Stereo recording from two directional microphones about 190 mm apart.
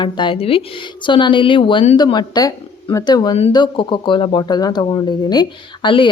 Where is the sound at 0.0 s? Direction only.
25° left (ahead or behind).